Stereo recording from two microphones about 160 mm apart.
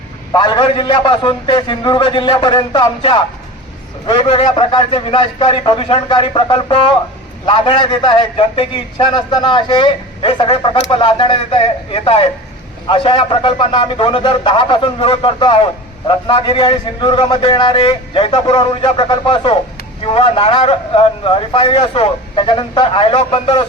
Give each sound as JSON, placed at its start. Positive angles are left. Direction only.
{"t": 0.3, "sound": "a man's voice", "side_deg": 30}